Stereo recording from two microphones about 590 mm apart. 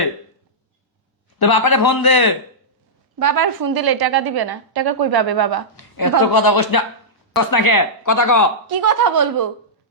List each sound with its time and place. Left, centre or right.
1.4 s speech: left
3.2 s a woman's voice: right
5.7 s speech: left
8.8 s speech: right